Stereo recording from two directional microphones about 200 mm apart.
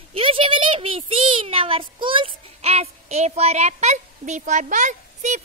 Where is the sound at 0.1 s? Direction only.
25° right (ahead or behind).